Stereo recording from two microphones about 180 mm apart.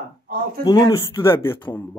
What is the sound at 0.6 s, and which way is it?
Speech, 25° left (ahead or behind).